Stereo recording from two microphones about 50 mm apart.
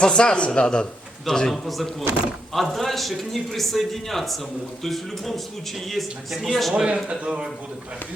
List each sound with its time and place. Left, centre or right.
0.0 s speech: centre
1.2 s a man's voice: centre
6.7 s speech: centre